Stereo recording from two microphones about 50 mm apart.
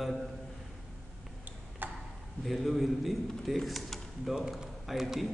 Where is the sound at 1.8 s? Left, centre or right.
Right.